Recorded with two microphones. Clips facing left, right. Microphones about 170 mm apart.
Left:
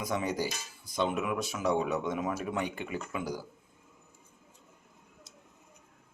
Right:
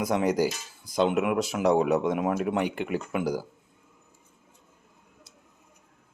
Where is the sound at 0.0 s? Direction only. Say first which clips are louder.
Right 7 dB; 75° right (ahead or behind).